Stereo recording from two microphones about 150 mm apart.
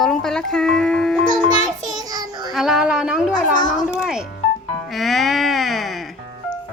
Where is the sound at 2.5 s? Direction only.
5° right (ahead or behind).